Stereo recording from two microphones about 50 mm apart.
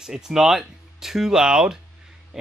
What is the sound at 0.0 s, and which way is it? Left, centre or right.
Speech, centre.